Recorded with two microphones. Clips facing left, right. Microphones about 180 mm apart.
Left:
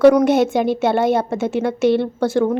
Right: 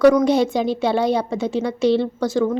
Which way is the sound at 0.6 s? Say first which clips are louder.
Left 2 dB; 55° left (ahead or behind).